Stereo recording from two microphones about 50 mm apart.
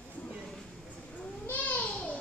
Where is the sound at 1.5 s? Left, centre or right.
Left.